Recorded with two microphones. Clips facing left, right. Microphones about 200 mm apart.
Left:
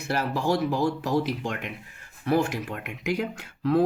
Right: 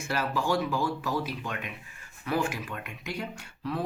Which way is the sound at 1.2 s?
70° left (ahead or behind).